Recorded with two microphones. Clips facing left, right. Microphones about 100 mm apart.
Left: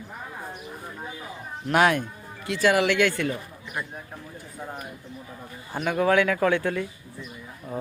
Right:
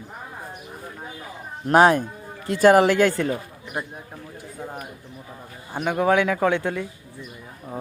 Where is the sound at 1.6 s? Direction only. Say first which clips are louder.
Right 5 dB; 35° right (ahead or behind).